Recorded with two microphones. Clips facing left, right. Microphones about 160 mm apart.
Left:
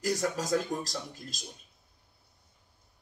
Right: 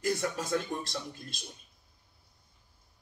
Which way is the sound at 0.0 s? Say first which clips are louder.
Left 1 dB; 40° left (ahead or behind).